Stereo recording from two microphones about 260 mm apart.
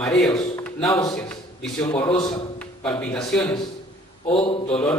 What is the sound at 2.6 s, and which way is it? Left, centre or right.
A man's voice, centre.